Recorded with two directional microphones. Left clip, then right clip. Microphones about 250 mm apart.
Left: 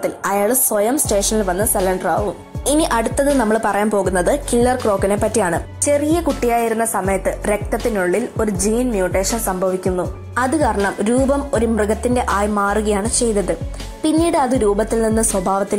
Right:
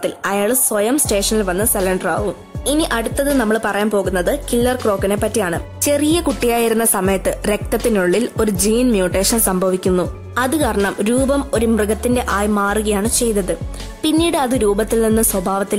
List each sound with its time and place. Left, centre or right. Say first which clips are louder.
0.0 s a woman's voice: even; centre
5.9 s a woman's voice: even; right
10.3 s a woman's voice: left 1 dB; right